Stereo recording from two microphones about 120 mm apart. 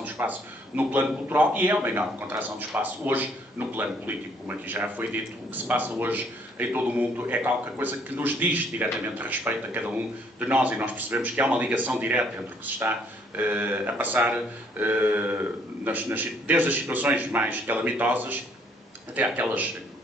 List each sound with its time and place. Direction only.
0.0 s a man's voice: 15° right (ahead or behind)